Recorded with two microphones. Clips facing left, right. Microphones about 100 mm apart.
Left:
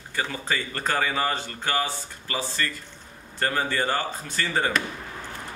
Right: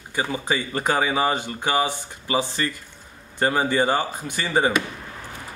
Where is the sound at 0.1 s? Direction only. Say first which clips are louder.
Right 4 dB; 15° right (ahead or behind).